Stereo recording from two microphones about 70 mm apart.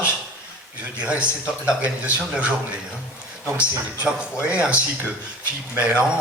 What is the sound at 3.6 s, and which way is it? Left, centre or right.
A man's voice, centre.